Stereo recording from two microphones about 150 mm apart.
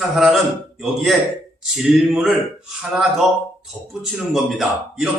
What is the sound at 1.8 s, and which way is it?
Speech, centre (ahead or behind).